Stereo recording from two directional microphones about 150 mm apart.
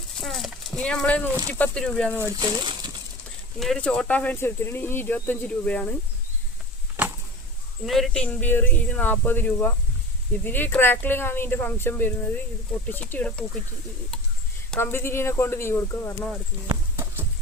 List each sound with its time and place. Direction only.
0.2 s a sound: centre (ahead or behind)
1.5 s speech: 10° left (ahead or behind)
2.1 s speech: 20° right (ahead or behind)
3.6 s speech: 5° left (ahead or behind)
7.9 s speech: centre (ahead or behind)
14.8 s speech: 15° left (ahead or behind)
16.6 s clip-clop: 15° right (ahead or behind)